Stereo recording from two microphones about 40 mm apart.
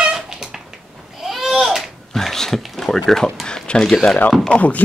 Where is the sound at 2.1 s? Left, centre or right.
Centre.